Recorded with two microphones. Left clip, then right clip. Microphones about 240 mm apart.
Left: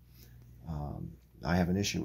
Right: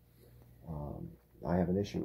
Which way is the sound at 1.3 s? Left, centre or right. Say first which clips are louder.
Left 1 dB; left.